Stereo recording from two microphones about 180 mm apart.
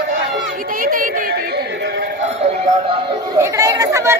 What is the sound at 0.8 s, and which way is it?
Chatter, 50° right (ahead or behind).